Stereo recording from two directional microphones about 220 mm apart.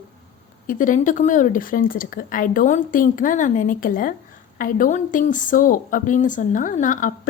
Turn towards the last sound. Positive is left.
turn(degrees=35)  # may be behind; listen again after turning